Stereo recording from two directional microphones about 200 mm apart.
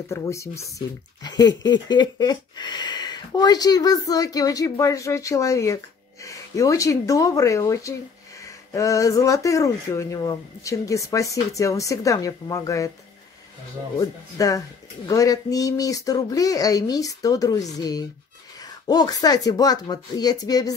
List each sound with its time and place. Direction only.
0.1 s speech: 15° left (ahead or behind)
13.9 s speech: 15° left (ahead or behind)